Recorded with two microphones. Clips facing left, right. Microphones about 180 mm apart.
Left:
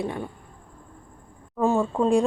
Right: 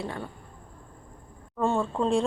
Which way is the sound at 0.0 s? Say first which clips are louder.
Left 5 dB; 15° left (ahead or behind).